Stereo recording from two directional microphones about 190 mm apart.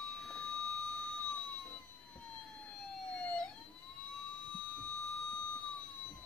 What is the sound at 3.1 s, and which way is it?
Emergency vehicle, 5° left (ahead or behind).